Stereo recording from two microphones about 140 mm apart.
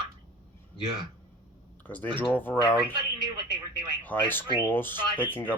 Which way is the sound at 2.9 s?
30° right (ahead or behind).